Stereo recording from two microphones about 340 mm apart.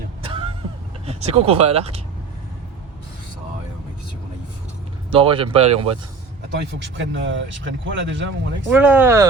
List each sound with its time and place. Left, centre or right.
0.2 s vehicle: centre
1.0 s speech: centre
5.1 s speech: centre
6.7 s speech: right
8.7 s speech: centre